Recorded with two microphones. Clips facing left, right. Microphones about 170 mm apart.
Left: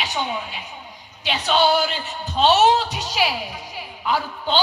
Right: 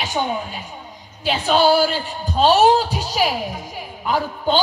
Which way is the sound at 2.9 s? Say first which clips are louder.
Right 3 dB; 35° right (ahead or behind).